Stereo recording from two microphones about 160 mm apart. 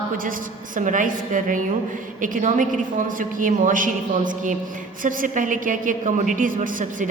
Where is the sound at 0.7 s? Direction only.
55° right (ahead or behind).